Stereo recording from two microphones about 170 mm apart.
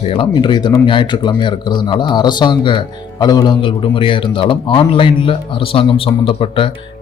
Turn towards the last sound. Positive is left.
turn(degrees=30)  # may be behind; listen again after turning